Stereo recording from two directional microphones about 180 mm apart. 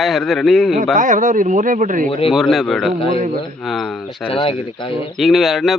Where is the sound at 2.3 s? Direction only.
Centre (ahead or behind).